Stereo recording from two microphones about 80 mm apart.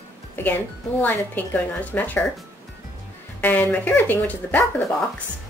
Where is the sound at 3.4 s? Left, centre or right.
Left.